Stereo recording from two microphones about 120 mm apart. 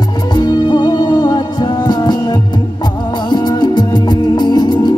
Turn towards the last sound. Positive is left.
turn(degrees=35)  # may be behind; listen again after turning